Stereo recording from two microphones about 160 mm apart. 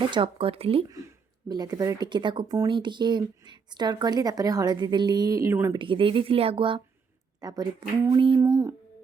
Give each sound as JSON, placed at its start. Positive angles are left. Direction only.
{"t": 0.1, "sound": "speech", "side_deg": -35}
{"t": 0.9, "sound": "speech", "side_deg": -20}
{"t": 5.8, "sound": "speech", "side_deg": -30}